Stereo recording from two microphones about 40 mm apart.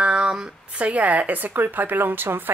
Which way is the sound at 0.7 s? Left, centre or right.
Right.